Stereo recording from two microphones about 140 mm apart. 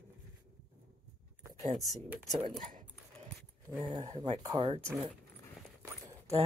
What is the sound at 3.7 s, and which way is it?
Speech, 10° left (ahead or behind).